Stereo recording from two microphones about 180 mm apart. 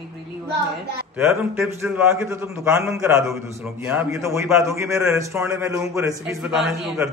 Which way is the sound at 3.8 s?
5° right (ahead or behind).